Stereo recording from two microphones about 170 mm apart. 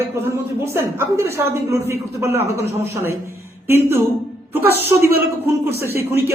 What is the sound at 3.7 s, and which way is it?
A woman's voice, 15° right (ahead or behind).